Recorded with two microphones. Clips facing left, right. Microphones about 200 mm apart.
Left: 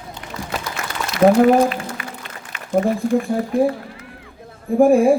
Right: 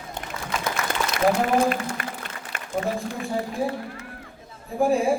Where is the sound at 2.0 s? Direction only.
45° right (ahead or behind).